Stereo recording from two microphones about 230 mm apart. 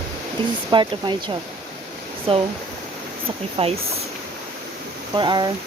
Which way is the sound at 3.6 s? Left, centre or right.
Right.